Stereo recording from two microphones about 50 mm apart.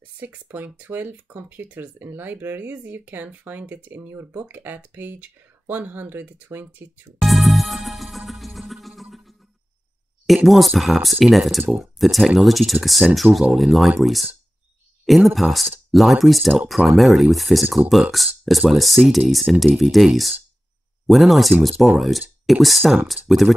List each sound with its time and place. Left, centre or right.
0.2 s speech: right
7.2 s music: centre
10.2 s speech: centre